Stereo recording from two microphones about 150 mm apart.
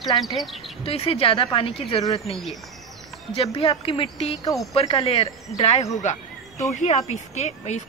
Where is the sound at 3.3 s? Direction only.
40° left (ahead or behind).